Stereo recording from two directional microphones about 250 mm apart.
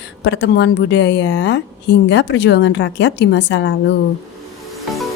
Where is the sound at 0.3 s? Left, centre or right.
Left.